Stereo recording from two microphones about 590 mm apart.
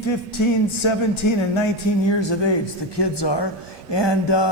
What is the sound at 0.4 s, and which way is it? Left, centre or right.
Speech, left.